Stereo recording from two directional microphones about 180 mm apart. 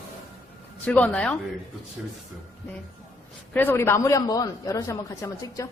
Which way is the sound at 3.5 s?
10° left (ahead or behind).